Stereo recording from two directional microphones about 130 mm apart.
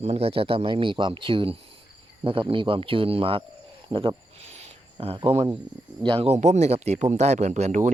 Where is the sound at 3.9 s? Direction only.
45° right (ahead or behind).